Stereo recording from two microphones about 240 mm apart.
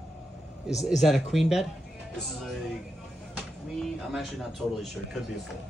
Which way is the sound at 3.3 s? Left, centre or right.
Centre.